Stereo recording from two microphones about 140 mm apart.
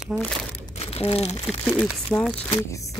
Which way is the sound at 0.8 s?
45° left (ahead or behind).